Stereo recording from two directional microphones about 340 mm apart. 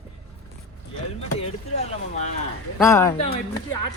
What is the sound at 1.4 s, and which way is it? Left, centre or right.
Speech, centre.